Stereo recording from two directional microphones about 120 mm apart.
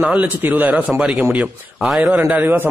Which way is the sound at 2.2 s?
15° right (ahead or behind).